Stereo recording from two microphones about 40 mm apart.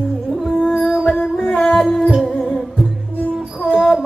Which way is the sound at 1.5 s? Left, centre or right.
Centre.